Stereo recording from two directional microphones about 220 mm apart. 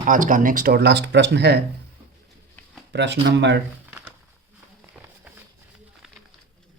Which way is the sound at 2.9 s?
50° right (ahead or behind).